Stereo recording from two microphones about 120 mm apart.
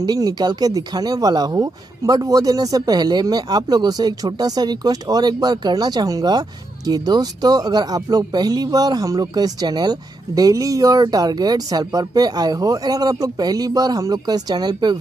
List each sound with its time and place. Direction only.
0.0 s speech: 35° right (ahead or behind)